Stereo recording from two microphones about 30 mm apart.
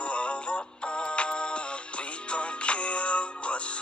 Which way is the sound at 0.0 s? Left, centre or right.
Left.